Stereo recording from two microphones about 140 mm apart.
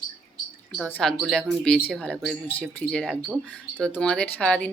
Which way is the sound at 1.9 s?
5° left (ahead or behind).